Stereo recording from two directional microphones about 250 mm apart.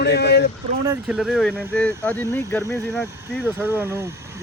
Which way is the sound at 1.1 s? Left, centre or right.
Centre.